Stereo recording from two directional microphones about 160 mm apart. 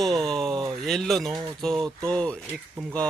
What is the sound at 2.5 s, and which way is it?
Speech, 10° right (ahead or behind).